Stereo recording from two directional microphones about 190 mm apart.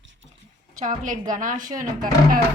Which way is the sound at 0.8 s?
45° right (ahead or behind).